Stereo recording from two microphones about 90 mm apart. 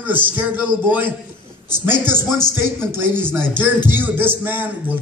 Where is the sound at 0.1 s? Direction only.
20° right (ahead or behind).